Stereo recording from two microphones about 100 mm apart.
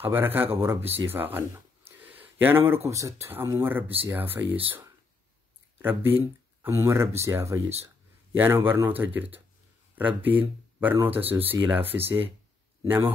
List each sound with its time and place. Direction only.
0.0 s speech: 20° right (ahead or behind)
1.9 s a sound: 20° right (ahead or behind)
2.9 s speech: 30° right (ahead or behind)
5.8 s speech: 20° right (ahead or behind)
11.0 s speech: 70° right (ahead or behind)
11.2 s speech: 20° right (ahead or behind)
11.8 s speech: 70° right (ahead or behind)
12.8 s speech: 20° right (ahead or behind)